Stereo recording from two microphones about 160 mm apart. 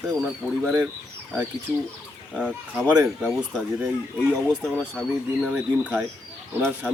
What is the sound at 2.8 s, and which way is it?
Speech, centre (ahead or behind).